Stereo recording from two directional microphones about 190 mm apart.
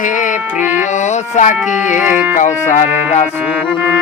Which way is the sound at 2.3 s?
40° left (ahead or behind).